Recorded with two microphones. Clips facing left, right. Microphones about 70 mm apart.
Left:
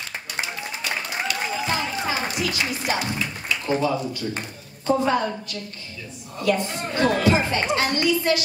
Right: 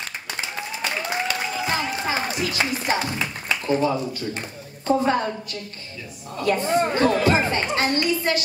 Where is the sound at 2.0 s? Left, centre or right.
Right.